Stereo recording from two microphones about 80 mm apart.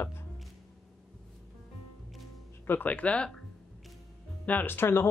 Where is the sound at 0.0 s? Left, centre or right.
Left.